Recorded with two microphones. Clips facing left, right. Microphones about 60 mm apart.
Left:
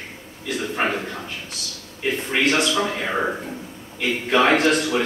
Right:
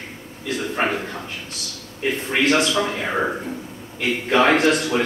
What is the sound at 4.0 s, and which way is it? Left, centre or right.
A man's voice, right.